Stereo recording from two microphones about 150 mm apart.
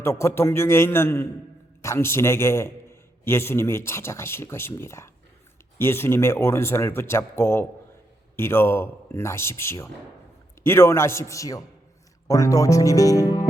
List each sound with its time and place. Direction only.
0.0 s a man's voice: 15° left (ahead or behind)